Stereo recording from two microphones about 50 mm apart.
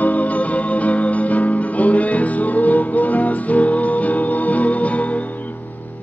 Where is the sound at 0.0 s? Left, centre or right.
Left.